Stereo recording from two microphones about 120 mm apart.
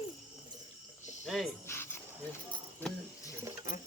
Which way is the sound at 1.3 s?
Centre (ahead or behind).